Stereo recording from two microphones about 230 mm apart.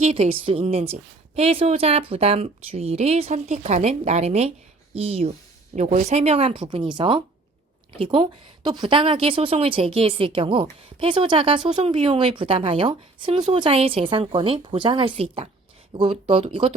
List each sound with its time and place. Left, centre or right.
0.0 s a woman's voice: right